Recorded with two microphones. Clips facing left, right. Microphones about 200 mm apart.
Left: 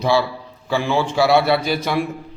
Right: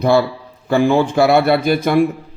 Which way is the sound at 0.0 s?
55° right (ahead or behind).